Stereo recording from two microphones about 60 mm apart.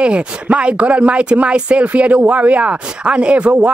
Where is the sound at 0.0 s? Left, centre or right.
Centre.